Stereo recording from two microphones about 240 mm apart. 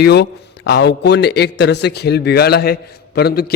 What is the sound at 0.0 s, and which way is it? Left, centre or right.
A man's voice, left.